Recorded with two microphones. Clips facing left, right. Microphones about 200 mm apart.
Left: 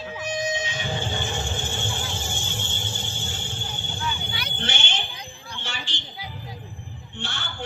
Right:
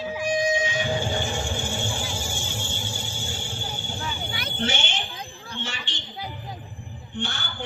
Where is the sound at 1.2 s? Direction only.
10° right (ahead or behind).